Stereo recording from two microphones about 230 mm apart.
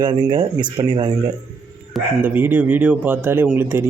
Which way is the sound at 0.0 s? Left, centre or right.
Centre.